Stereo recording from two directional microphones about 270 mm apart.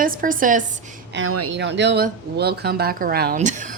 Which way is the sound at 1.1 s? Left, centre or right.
Right.